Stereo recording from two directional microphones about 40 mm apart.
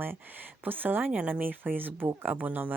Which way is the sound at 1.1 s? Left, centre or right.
Right.